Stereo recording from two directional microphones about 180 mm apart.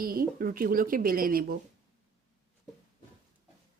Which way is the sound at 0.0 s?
55° right (ahead or behind).